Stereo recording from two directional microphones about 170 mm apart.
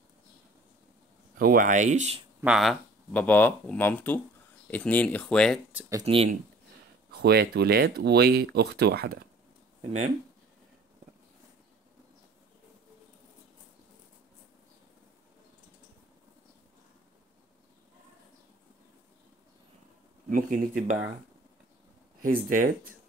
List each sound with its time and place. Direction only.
1.4 s speech: 55° right (ahead or behind)
2.4 s speech: centre (ahead or behind)
5.7 s speech: 10° right (ahead or behind)
6.0 s speech: 35° right (ahead or behind)
7.1 s speech: 70° right (ahead or behind)
9.8 s speech: 40° right (ahead or behind)
20.2 s speech: 55° right (ahead or behind)
22.2 s speech: 55° right (ahead or behind)